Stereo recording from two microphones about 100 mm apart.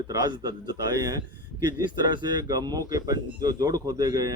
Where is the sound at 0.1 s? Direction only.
40° right (ahead or behind).